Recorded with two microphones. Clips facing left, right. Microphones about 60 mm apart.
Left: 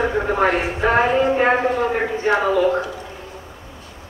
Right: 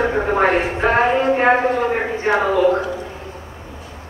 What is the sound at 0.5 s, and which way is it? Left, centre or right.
Speech, right.